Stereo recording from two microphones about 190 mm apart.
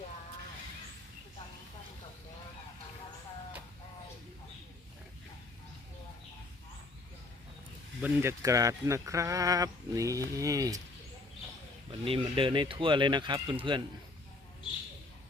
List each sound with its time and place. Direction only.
8.0 s speech: 15° right (ahead or behind)
11.9 s speech: 30° right (ahead or behind)